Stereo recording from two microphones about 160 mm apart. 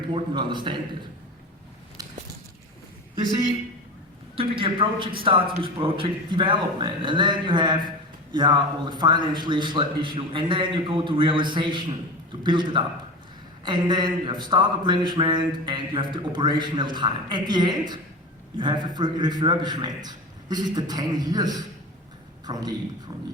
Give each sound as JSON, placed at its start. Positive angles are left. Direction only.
{"t": 0.1, "sound": "a man's voice", "side_deg": -30}
{"t": 2.0, "sound": "biting", "side_deg": -25}
{"t": 4.4, "sound": "a man's voice", "side_deg": -35}